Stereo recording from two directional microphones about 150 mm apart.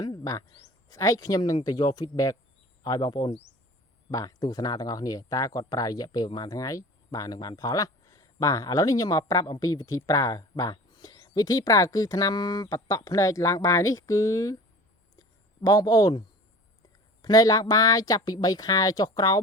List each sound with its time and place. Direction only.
0.0 s a sound: 25° left (ahead or behind)
0.6 s speech: 20° left (ahead or behind)
15.6 s speech: 25° left (ahead or behind)
17.2 s speech: 25° left (ahead or behind)